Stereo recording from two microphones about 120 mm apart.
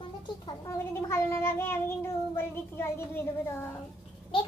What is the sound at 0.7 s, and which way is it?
Child singing, 20° left (ahead or behind).